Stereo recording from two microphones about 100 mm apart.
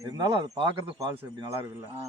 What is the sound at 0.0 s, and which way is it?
Speech, 40° right (ahead or behind).